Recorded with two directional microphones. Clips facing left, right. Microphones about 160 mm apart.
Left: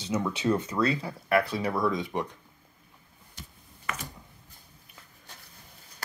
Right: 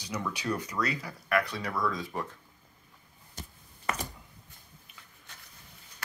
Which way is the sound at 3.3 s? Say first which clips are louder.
Right 2 dB; 40° right (ahead or behind).